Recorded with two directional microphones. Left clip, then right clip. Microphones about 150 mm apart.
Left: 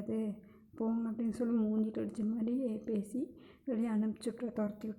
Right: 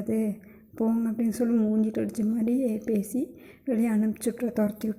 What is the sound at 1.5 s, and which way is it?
Speech, 5° right (ahead or behind).